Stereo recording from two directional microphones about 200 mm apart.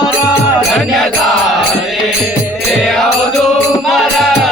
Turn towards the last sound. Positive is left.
turn(degrees=0)  # may be behind; listen again after turning